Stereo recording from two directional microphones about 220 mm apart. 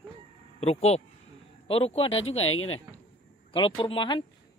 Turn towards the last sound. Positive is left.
turn(degrees=20)  # may be behind; listen again after turning